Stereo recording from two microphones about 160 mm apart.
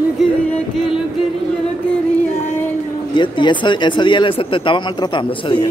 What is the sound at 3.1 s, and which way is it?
Speech, 30° left (ahead or behind).